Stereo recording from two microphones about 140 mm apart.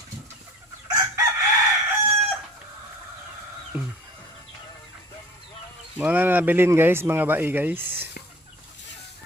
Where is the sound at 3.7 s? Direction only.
5° right (ahead or behind).